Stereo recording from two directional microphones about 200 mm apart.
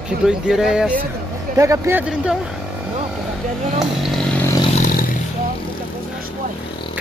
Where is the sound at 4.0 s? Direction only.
5° left (ahead or behind).